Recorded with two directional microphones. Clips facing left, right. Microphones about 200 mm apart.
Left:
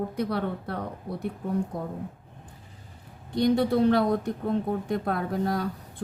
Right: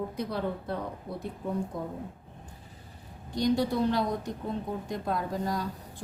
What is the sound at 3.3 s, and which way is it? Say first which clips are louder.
Speech: left 4 dB; 60° left (ahead or behind).